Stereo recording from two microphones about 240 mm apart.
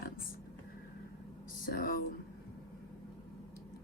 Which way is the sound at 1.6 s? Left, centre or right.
Left.